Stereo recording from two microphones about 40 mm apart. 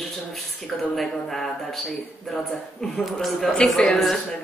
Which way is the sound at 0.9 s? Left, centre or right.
Centre.